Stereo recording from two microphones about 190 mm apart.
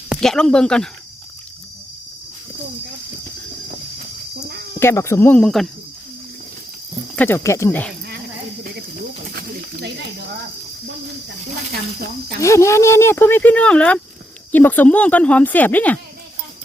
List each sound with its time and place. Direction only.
0.1 s speech: 5° left (ahead or behind)
4.8 s speech: 15° left (ahead or behind)
7.2 s speech: 10° left (ahead or behind)
9.3 s pigeon: 55° right (ahead or behind)
12.4 s speech: 15° left (ahead or behind)